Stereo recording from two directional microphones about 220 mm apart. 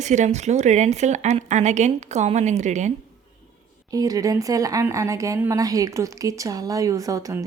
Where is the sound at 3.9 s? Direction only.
15° right (ahead or behind).